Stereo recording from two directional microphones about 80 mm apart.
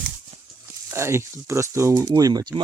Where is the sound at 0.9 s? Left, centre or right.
Right.